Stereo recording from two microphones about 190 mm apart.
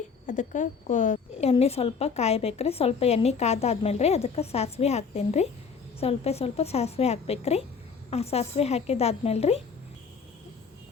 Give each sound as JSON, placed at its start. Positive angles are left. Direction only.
{"t": 0.3, "sound": "a woman's voice", "side_deg": 40}